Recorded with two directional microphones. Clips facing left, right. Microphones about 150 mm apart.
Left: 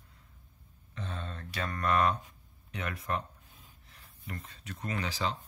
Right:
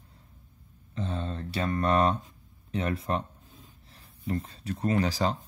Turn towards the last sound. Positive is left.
turn(degrees=-40)  # may be behind; listen again after turning